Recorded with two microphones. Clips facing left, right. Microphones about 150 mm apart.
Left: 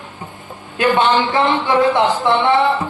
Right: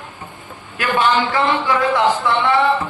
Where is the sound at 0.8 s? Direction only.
25° left (ahead or behind).